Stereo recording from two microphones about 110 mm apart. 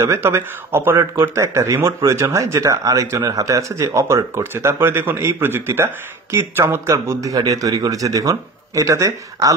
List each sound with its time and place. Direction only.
0.1 s speech: 25° right (ahead or behind)